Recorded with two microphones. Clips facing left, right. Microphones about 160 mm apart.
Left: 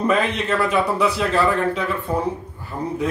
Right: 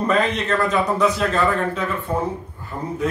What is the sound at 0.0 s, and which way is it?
A man's voice, 10° left (ahead or behind).